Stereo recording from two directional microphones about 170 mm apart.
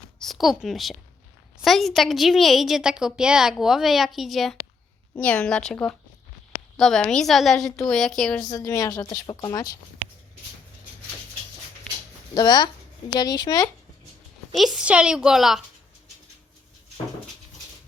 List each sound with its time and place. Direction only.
0.2 s a woman's voice: centre (ahead or behind)
8.4 s a woman's voice: 20° left (ahead or behind)
12.3 s speech: 25° left (ahead or behind)
14.5 s a woman's voice: centre (ahead or behind)